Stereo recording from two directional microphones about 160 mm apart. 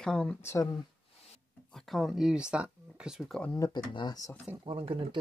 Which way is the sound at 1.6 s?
Centre (ahead or behind).